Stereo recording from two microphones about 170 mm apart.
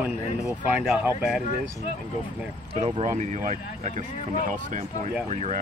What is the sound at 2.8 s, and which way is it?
Speech, 40° right (ahead or behind).